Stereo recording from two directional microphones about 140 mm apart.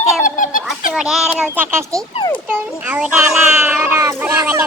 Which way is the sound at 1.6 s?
20° right (ahead or behind).